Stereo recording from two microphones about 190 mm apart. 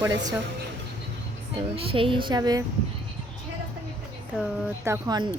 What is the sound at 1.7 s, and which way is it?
Speech, 30° right (ahead or behind).